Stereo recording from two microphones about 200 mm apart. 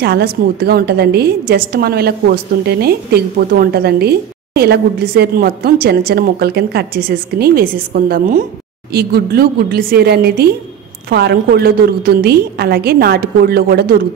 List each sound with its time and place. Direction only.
0.0 s a woman's voice: 50° right (ahead or behind)